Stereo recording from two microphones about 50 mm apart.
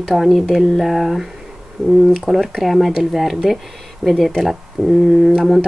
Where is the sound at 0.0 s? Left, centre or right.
Centre.